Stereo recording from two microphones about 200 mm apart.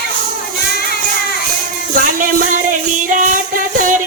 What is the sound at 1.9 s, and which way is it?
Music, 40° right (ahead or behind).